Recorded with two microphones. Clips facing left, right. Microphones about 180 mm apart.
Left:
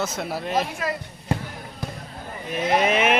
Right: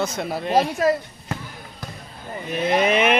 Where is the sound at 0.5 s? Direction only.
40° right (ahead or behind).